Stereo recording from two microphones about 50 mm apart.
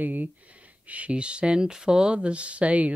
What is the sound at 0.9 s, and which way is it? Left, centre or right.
Speech, right.